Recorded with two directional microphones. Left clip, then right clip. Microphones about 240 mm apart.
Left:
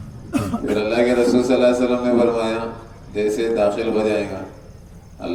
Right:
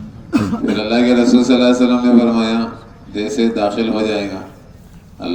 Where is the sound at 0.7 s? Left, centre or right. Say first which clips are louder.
Right 2 dB; right.